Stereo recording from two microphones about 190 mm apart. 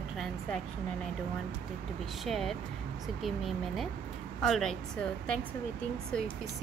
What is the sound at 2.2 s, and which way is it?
Speech, centre (ahead or behind).